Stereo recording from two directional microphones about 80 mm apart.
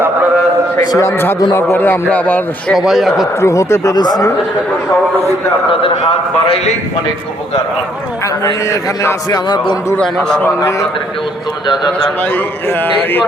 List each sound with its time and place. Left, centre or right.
0.8 s a man's voice: left
1.0 s speech: left
2.7 s a man's voice: centre
3.4 s a man's voice: left
3.9 s speech: left
8.7 s a man's voice: left
10.0 s a man's voice: centre
12.2 s speech: left